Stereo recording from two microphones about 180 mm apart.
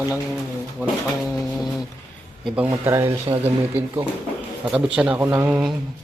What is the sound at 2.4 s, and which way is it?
Speech, 5° right (ahead or behind).